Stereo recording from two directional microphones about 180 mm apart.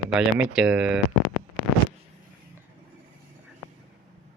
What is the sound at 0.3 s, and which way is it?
Speech, 5° right (ahead or behind).